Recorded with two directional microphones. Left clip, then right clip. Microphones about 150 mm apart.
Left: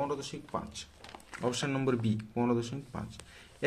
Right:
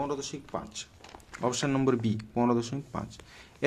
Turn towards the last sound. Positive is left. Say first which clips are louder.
# right 5 dB
turn(degrees=-35)  # may be behind; listen again after turning